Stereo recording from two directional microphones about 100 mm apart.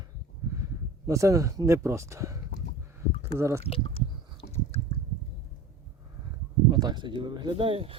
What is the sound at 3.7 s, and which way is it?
Speech, 75° left (ahead or behind).